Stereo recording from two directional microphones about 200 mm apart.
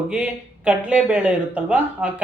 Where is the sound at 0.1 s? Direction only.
5° right (ahead or behind).